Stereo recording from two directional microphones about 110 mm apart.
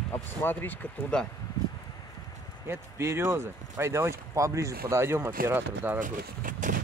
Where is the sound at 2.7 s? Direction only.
25° right (ahead or behind).